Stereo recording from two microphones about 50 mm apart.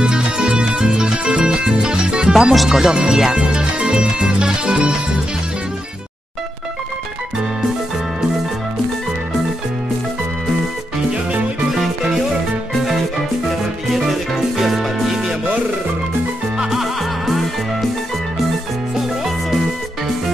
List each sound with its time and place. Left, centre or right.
0.0 s music: centre
11.7 s music: centre
14.6 s music: centre
16.5 s music: centre